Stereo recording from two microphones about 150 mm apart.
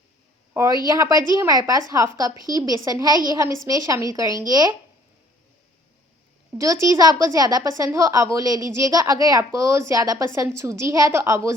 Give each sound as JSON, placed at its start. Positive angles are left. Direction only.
{"t": 0.5, "sound": "a woman's voice", "side_deg": -20}
{"t": 6.5, "sound": "a woman's voice", "side_deg": -20}